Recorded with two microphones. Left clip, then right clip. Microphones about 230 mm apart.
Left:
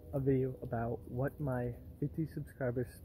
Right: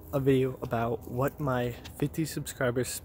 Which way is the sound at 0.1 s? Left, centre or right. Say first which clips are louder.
Right 8 dB; right.